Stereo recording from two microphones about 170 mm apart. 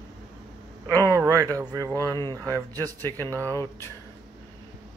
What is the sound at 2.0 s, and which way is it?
Speech, 15° left (ahead or behind).